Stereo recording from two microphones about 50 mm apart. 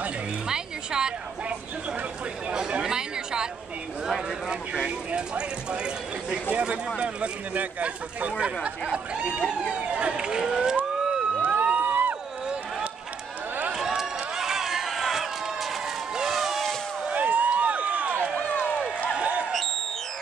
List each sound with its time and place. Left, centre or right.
0.5 s a sound: centre
2.8 s chatter: centre
4.8 s speech: centre
11.3 s music: right
13.7 s run: centre
16.2 s a sound: centre
17.1 s run: right
18.5 s run: left
19.1 s a sound: right